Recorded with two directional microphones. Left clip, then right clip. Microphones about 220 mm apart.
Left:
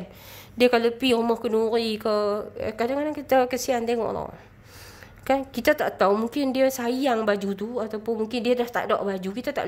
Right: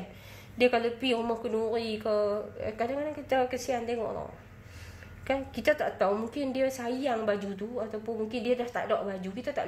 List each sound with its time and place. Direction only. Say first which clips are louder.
0.6 s a woman's voice: left 6 dB; 40° left (ahead or behind)